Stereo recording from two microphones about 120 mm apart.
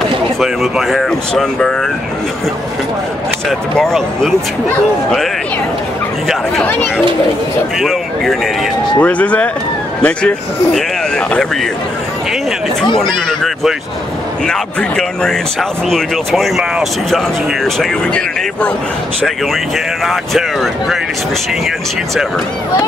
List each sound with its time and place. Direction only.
0.4 s speech: centre (ahead or behind)
3.4 s speech: 5° left (ahead or behind)
6.6 s speech: 15° left (ahead or behind)
7.8 s speech: centre (ahead or behind)
9.0 s speech: 10° left (ahead or behind)
12.9 s speech: 5° left (ahead or behind)
20.1 s speech: centre (ahead or behind)